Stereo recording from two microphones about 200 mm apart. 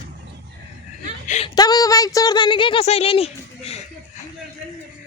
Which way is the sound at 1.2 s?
35° left (ahead or behind).